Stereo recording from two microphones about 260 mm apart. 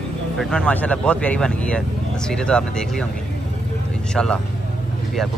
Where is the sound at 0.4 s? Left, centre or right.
Centre.